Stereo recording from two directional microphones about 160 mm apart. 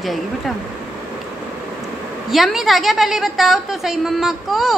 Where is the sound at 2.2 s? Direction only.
Centre (ahead or behind).